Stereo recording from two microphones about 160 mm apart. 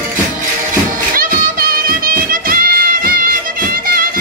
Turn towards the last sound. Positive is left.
turn(degrees=-65)  # may be behind; listen again after turning